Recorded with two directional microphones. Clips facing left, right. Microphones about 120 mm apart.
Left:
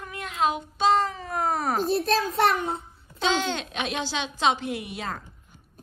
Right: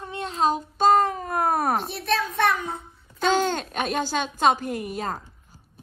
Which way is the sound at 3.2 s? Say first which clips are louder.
Right 3 dB; 45° right (ahead or behind).